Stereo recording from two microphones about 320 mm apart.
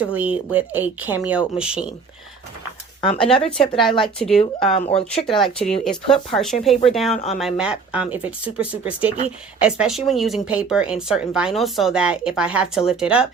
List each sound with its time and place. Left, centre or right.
0.0 s speech: centre
3.3 s speech: centre
3.8 s speech: centre
4.4 s speech: centre
5.8 s speech: centre